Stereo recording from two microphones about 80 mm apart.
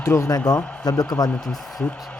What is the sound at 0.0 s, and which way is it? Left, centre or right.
Speech, left.